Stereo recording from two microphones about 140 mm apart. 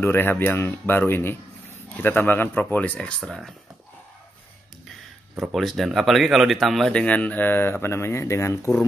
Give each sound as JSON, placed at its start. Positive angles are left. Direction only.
{"t": 0.0, "sound": "speech", "side_deg": 15}
{"t": 5.4, "sound": "speech", "side_deg": 0}